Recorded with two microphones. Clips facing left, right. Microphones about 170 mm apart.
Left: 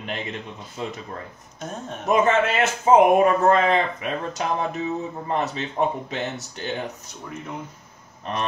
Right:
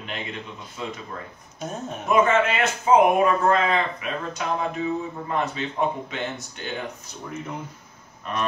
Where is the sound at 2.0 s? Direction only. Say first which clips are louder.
Even; 40° left (ahead or behind).